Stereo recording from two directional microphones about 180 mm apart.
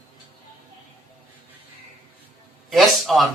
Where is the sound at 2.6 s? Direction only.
Centre (ahead or behind).